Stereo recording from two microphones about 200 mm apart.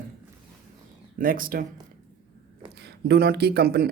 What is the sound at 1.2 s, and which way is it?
Speech, 45° right (ahead or behind).